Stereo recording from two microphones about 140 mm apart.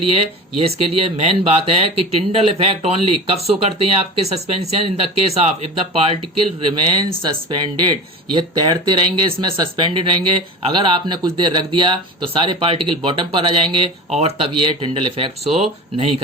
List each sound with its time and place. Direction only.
0.1 s speech: 45° right (ahead or behind)
14.1 s speech: 45° right (ahead or behind)
15.4 s speech: centre (ahead or behind)